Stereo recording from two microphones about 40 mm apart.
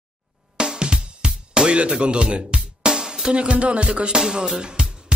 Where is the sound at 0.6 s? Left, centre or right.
Right.